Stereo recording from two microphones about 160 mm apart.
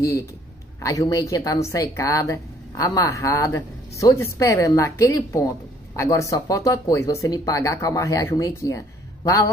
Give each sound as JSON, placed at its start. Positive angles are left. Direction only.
{"t": 0.7, "sound": "a woman's voice", "side_deg": 20}